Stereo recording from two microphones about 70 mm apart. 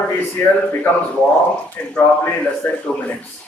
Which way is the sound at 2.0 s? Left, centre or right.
Left.